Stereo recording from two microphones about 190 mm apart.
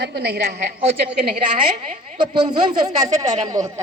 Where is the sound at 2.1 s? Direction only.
25° right (ahead or behind).